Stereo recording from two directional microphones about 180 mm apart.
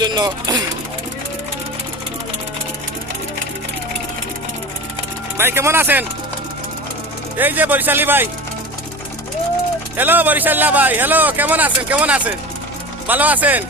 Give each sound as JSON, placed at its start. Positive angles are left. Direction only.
{"t": 0.0, "sound": "speech", "side_deg": -25}
{"t": 5.4, "sound": "a man's voice", "side_deg": -15}
{"t": 7.3, "sound": "a man's voice", "side_deg": -10}
{"t": 10.0, "sound": "a man's voice", "side_deg": -10}